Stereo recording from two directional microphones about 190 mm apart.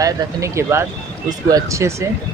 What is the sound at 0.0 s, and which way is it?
Speech, 15° right (ahead or behind).